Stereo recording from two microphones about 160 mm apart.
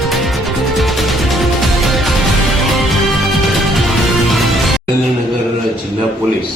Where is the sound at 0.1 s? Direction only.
Centre (ahead or behind).